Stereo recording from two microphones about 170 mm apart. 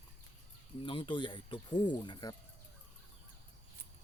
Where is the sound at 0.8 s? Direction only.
30° left (ahead or behind).